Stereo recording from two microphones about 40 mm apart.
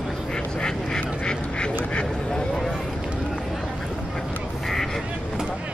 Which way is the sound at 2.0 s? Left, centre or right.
Centre.